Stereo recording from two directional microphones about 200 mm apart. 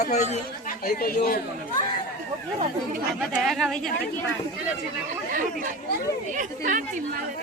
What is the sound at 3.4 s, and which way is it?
Speech, centre (ahead or behind).